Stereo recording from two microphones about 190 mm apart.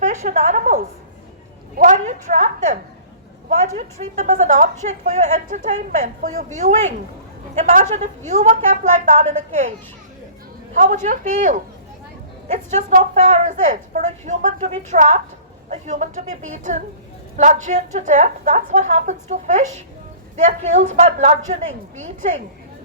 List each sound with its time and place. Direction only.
0.0 s a woman's voice: 40° right (ahead or behind)
4.1 s a woman's voice: 40° right (ahead or behind)
10.8 s a woman's voice: 40° right (ahead or behind)